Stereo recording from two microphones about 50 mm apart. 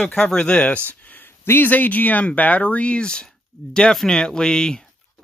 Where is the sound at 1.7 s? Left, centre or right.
Left.